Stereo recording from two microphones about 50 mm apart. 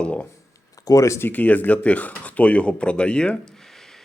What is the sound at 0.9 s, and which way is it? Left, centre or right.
Speech, left.